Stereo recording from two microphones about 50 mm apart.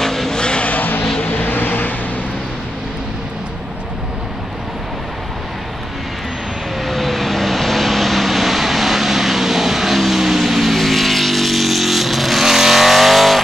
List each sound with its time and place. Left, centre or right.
0.0 s vehicle: centre
0.4 s vehicle: centre
0.7 s vehicle: left
1.0 s vehicle: centre
1.3 s vehicle: left
6.8 s vehicle: centre